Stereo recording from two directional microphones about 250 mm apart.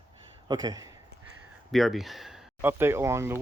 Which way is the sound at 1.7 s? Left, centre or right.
Centre.